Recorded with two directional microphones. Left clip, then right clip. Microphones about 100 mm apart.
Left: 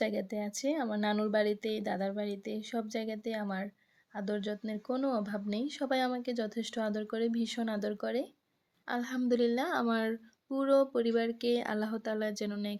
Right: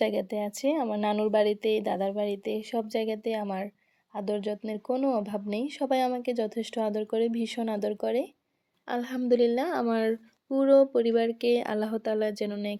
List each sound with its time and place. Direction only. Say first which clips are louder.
0.0 s a woman's voice: right 6 dB; 40° right (ahead or behind); by 12.7 s 25° right (ahead or behind)